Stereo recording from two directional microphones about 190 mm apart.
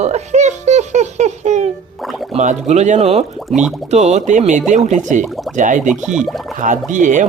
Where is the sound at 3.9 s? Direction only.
35° right (ahead or behind).